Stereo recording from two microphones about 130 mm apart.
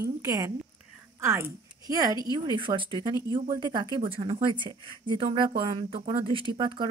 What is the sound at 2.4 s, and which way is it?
Speech, 40° right (ahead or behind).